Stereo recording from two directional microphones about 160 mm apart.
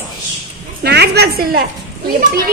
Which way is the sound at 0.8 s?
90° right.